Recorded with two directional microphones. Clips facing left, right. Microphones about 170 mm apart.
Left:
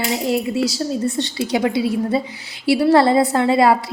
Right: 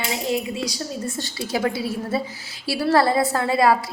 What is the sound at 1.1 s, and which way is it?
A woman's voice, 20° left (ahead or behind).